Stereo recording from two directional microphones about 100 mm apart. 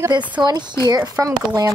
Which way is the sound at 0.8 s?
40° right (ahead or behind).